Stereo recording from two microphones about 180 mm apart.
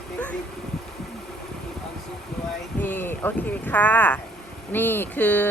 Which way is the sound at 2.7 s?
10° left (ahead or behind).